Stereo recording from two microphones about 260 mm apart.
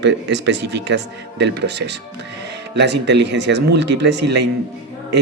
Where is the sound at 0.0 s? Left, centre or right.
Right.